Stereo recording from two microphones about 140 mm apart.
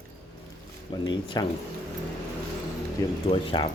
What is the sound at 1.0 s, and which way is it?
Speech, 30° left (ahead or behind).